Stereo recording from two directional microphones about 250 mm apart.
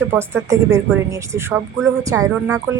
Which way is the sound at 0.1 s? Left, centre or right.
Centre.